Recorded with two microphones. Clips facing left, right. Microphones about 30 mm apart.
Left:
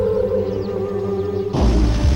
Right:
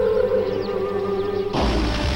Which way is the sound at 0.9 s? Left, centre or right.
Right.